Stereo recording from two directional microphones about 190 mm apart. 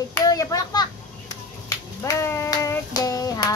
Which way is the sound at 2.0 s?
15° left (ahead or behind).